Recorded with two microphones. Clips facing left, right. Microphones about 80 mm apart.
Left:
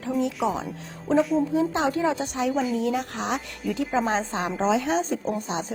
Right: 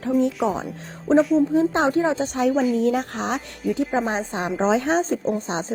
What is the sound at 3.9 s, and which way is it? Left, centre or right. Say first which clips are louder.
Speech: right 1 dB; right.